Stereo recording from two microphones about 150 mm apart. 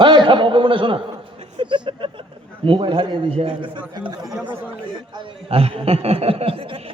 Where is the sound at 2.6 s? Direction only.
35° right (ahead or behind).